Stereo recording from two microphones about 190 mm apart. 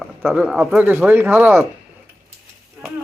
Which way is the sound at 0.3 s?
10° right (ahead or behind).